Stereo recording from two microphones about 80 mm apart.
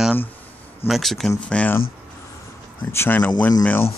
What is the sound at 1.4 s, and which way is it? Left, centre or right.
Speech, centre.